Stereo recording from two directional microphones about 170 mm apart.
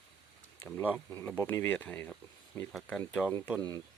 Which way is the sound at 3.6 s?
25° right (ahead or behind).